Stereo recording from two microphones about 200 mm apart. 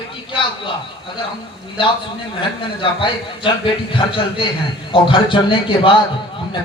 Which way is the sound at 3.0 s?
25° left (ahead or behind).